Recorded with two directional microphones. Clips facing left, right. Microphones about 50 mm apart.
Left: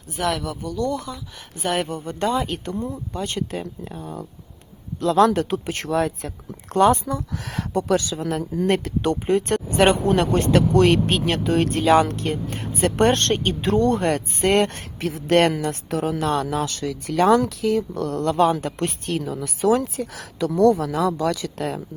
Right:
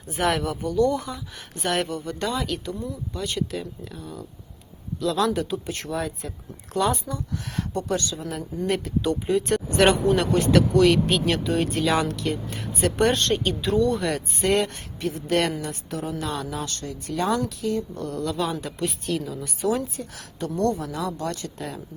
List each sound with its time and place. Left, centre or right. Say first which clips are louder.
0.2 s speech: right 1 dB; centre
1.5 s speech: left 2 dB; centre
1.9 s speech: left 4 dB; left
2.6 s speech: left 3 dB; left
5.3 s speech: left 4 dB; left
6.7 s speech: left 7 dB; left
7.0 s speech: left 4 dB; left
9.7 s speech: left 2 dB; left
10.1 s speech: left 2 dB; left
11.5 s speech: left 4 dB; left
11.8 s speech: left 6 dB; left
15.0 s speech: left 5 dB; left
16.2 s speech: left 7 dB; left
21.6 s speech: left 7 dB; left